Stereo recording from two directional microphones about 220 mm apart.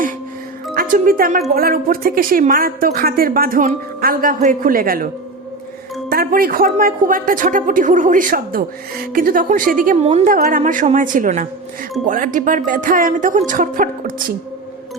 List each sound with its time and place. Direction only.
0.7 s speech: 40° right (ahead or behind)
6.1 s speech: 40° right (ahead or behind)